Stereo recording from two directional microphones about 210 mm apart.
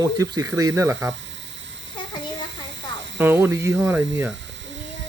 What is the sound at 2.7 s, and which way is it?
Snake, 60° right (ahead or behind).